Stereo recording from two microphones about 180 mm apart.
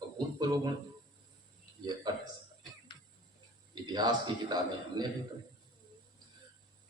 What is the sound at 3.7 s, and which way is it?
Speech, 25° right (ahead or behind).